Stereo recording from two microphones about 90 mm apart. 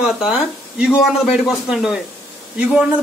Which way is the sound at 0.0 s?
10° right (ahead or behind).